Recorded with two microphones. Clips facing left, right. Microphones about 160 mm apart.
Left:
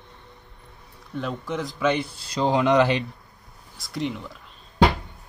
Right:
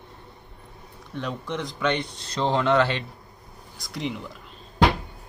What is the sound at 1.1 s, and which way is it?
Speech, centre (ahead or behind).